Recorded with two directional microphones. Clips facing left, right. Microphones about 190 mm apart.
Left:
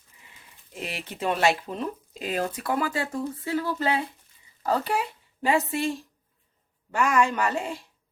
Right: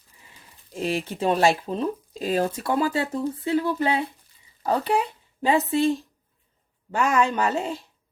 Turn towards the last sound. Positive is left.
turn(degrees=-25)  # may be behind; listen again after turning